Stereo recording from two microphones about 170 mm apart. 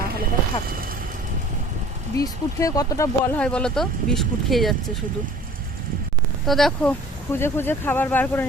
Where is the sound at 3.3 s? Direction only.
5° left (ahead or behind).